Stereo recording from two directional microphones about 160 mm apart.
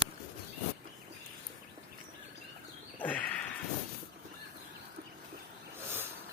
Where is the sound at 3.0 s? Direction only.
10° left (ahead or behind).